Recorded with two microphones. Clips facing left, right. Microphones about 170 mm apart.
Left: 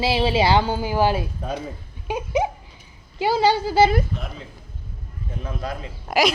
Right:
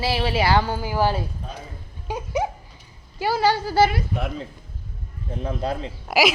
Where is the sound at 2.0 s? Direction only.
20° left (ahead or behind).